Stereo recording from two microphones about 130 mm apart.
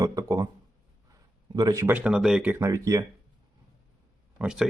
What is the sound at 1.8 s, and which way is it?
Speech, 10° right (ahead or behind).